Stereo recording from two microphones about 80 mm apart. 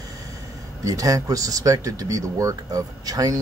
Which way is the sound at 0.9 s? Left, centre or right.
Right.